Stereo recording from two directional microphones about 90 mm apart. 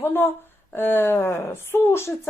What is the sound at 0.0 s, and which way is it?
Speech, 25° left (ahead or behind).